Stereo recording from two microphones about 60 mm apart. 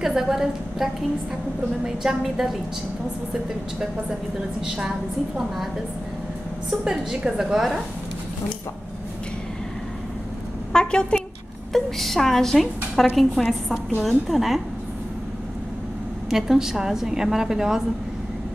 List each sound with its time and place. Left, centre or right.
0.0 s a woman's voice: centre
2.0 s a woman's voice: centre
4.6 s a woman's voice: centre
6.8 s a woman's voice: centre
10.7 s a woman's voice: centre
11.7 s a woman's voice: centre
16.3 s a woman's voice: centre